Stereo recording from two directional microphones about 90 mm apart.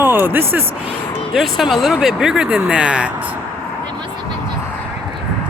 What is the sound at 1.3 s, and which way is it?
Speech, centre (ahead or behind).